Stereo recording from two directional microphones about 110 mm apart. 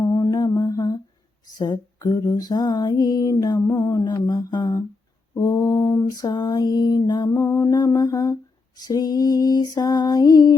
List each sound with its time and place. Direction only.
0.0 s mantra: 30° left (ahead or behind)
1.5 s humming: 40° left (ahead or behind)